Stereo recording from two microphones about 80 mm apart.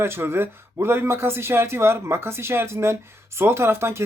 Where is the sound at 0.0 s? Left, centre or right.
Right.